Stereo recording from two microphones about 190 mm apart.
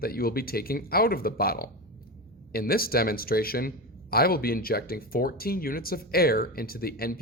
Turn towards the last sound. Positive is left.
turn(degrees=50)  # may be behind; listen again after turning